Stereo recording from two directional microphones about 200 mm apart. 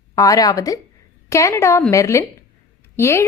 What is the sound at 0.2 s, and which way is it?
A woman's voice, 15° left (ahead or behind).